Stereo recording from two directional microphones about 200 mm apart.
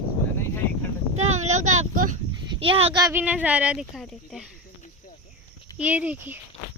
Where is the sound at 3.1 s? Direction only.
5° right (ahead or behind).